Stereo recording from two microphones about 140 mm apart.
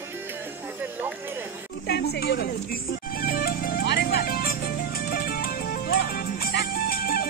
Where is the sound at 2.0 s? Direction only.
90° left.